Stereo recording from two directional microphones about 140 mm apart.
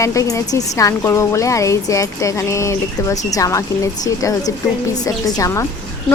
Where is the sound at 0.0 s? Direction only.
20° left (ahead or behind).